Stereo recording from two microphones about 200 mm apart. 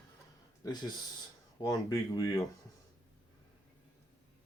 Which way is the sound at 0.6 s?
20° left (ahead or behind).